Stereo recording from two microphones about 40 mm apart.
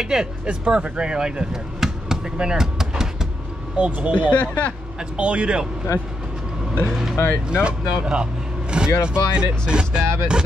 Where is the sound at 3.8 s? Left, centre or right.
Right.